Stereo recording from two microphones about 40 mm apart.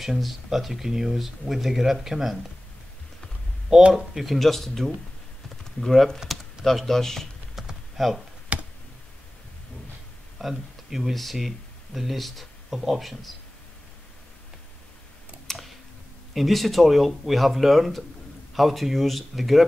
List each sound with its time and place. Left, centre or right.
0.0 s speech: centre
3.9 s speech: centre
6.1 s speech: centre
7.6 s typing: centre
8.0 s speech: centre
8.5 s a sound: right
10.4 s speech: centre
15.5 s tick: centre
16.3 s speech: centre